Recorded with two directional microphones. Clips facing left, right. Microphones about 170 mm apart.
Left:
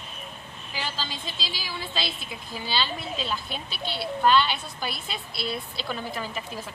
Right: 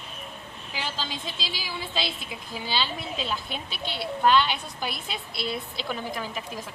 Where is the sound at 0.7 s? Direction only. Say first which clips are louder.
Even; 20° right (ahead or behind).